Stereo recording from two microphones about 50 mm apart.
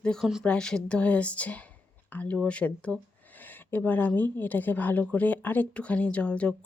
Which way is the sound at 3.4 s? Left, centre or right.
Left.